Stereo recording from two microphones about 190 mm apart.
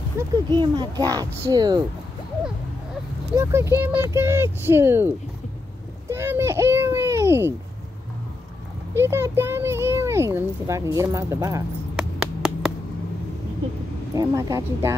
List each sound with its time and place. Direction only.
0.2 s a child's voice: 15° right (ahead or behind)
3.3 s a child's voice: 15° right (ahead or behind)
8.9 s a child's voice: 15° right (ahead or behind)
11.9 s a sound: 5° right (ahead or behind)
14.1 s a child's voice: 20° right (ahead or behind)